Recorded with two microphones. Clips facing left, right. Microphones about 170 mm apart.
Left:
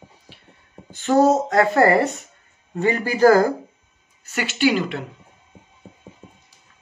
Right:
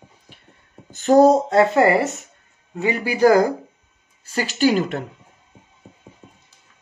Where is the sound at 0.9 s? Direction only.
40° right (ahead or behind).